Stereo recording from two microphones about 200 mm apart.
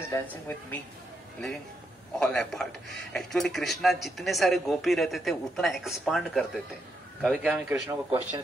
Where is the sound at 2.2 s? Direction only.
Centre (ahead or behind).